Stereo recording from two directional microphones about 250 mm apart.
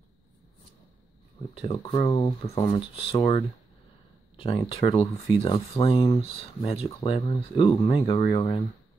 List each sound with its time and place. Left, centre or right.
1.5 s speech: left